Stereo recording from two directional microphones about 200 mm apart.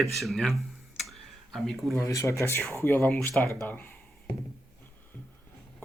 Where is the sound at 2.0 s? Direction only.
15° left (ahead or behind).